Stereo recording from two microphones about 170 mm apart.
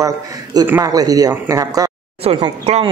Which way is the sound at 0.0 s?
20° right (ahead or behind).